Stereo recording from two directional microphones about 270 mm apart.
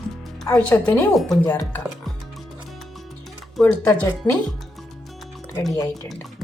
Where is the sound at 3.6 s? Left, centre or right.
Centre.